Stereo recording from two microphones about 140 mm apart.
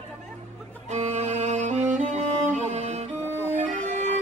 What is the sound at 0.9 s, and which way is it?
Music, 55° right (ahead or behind).